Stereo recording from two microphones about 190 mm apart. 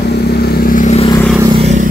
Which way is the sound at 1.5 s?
35° right (ahead or behind).